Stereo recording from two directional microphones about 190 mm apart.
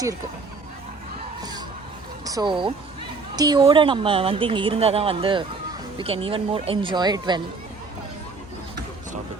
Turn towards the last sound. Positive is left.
turn(degrees=-20)  # may be behind; listen again after turning